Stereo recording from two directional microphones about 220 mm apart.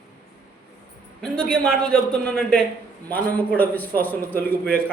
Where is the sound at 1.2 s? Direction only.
5° left (ahead or behind).